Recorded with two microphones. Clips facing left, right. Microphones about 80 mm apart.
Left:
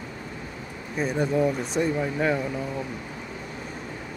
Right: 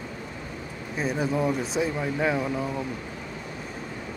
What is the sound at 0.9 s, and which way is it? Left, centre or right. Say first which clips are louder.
Speech: left 2 dB; centre.